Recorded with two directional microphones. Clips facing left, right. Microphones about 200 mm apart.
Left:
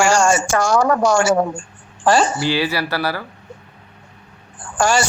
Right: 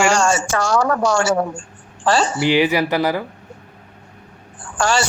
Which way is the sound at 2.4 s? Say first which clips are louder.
Right 4 dB; 20° right (ahead or behind).